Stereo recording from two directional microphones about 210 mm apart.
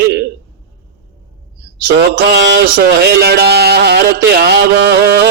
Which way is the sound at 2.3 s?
55° right (ahead or behind).